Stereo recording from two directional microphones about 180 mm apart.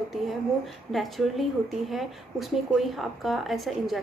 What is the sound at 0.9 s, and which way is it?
Speech, centre (ahead or behind).